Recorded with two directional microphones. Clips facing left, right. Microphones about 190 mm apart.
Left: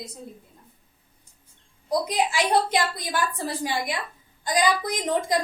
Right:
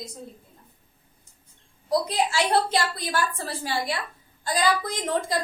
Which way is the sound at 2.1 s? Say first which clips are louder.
Left 3 dB; 15° left (ahead or behind).